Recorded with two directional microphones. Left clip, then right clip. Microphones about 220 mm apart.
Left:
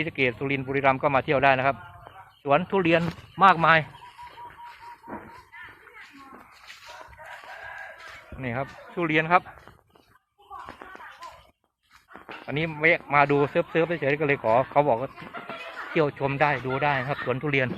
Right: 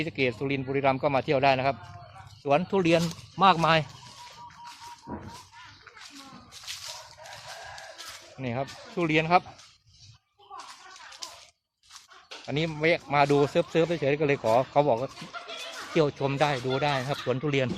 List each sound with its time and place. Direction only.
0.0 s a man's voice: 5° right (ahead or behind)
5.1 s dog: 40° right (ahead or behind)
8.4 s speech: 15° right (ahead or behind)
12.5 s speech: 15° right (ahead or behind)